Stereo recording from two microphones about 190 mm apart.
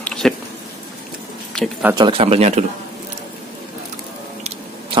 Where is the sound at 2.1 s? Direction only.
30° right (ahead or behind).